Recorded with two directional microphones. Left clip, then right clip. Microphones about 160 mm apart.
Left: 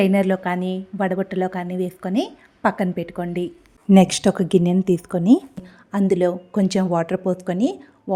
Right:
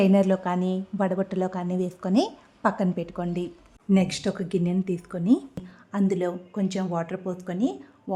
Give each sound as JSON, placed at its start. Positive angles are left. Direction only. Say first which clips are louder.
{"t": 0.0, "sound": "a woman's voice", "louder": "left 3 dB", "side_deg": 5}
{"t": 3.9, "sound": "speech", "louder": "left 10 dB", "side_deg": 40}
{"t": 6.6, "sound": "speech", "louder": "left 9 dB", "side_deg": 35}